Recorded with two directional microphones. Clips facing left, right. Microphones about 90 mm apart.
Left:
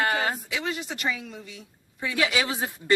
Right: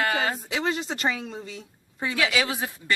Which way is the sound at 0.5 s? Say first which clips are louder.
Right 4 dB; 35° right (ahead or behind).